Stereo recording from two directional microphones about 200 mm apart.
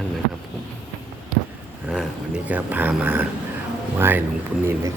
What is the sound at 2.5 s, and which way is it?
Speech, 10° right (ahead or behind).